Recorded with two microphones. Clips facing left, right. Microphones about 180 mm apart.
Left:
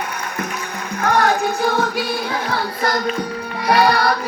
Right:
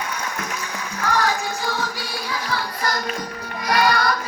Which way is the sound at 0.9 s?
55° left (ahead or behind).